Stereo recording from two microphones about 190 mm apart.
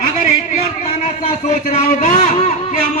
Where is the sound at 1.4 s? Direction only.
40° left (ahead or behind).